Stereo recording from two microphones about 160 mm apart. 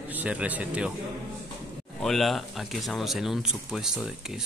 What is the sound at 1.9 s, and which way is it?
Speech, centre (ahead or behind).